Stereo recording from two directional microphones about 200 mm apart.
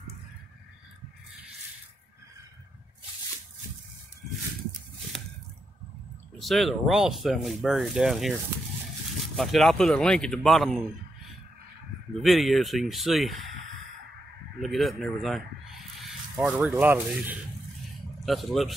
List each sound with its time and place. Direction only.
6.3 s speech: centre (ahead or behind)
9.4 s speech: centre (ahead or behind)
12.2 s speech: centre (ahead or behind)
14.6 s speech: centre (ahead or behind)